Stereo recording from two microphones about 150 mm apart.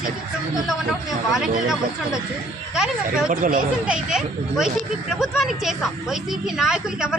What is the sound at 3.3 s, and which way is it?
Speech, 65° right (ahead or behind).